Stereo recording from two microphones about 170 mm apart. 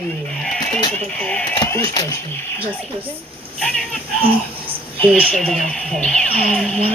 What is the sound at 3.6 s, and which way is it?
Speech, 5° left (ahead or behind).